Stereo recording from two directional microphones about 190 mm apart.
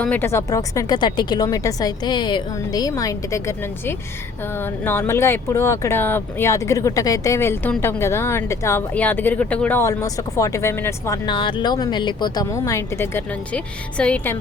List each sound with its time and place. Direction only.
0.0 s speech: 10° left (ahead or behind)
11.3 s speech: 25° left (ahead or behind); by 14.3 s 5° left (ahead or behind)